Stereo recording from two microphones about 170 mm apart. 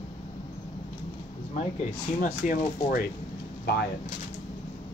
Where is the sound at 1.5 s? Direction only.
40° left (ahead or behind); by 3.1 s 55° left (ahead or behind).